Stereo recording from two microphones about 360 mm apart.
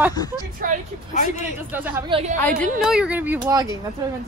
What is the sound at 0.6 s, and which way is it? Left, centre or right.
Speech, right.